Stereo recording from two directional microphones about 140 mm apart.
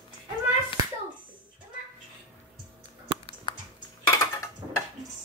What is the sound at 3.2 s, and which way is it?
Chewing, 35° left (ahead or behind).